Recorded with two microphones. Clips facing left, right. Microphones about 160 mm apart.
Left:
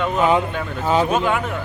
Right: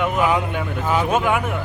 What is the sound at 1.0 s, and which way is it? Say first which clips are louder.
Speech: even; 15° right (ahead or behind).